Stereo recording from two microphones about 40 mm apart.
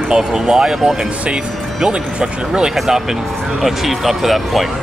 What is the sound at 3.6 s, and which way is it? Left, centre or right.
Speech, centre.